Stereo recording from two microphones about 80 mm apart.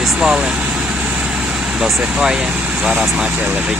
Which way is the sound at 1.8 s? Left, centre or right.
Centre.